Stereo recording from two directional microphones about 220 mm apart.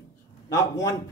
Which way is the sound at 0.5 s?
15° left (ahead or behind).